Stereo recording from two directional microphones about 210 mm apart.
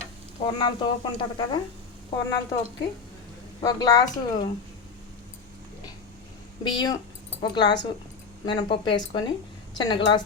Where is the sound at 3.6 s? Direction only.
15° left (ahead or behind).